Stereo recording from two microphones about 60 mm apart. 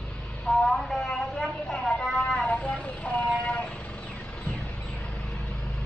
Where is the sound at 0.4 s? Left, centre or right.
Centre.